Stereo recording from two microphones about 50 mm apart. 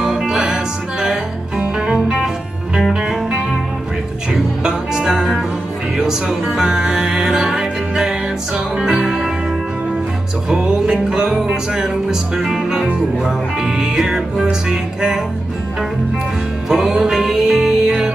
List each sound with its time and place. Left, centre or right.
0.0 s music: centre
1.6 s music: right
2.9 s music: centre
10.5 s music: centre
16.6 s music: centre